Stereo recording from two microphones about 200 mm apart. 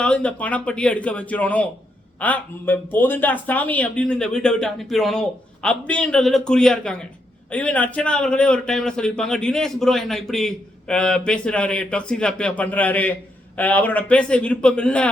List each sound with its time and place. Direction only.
0.0 s a man's voice: 5° left (ahead or behind)